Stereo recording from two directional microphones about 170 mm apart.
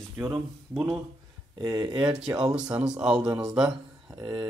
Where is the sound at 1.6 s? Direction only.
15° right (ahead or behind).